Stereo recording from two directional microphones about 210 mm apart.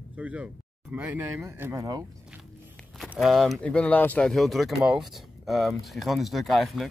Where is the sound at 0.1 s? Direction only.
5° right (ahead or behind).